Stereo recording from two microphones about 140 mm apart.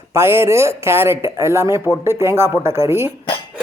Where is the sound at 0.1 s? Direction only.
15° right (ahead or behind).